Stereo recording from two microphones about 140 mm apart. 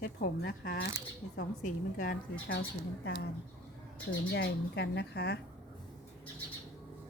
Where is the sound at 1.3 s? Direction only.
70° left (ahead or behind).